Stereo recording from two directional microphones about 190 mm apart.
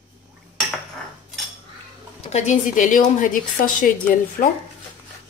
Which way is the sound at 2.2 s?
35° left (ahead or behind).